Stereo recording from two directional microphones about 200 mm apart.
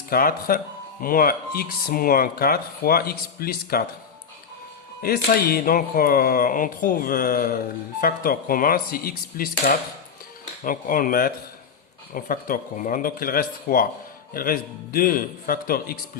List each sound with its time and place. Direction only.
0.1 s speech: 45° left (ahead or behind)
5.0 s speech: 50° left (ahead or behind)